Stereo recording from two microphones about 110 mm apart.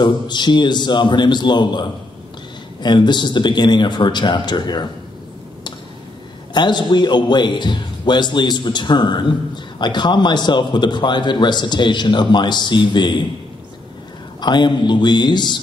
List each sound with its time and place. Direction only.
0.0 s a man's voice: 45° left (ahead or behind)
6.5 s a man's voice: 40° left (ahead or behind)
14.4 s a man's voice: 45° left (ahead or behind)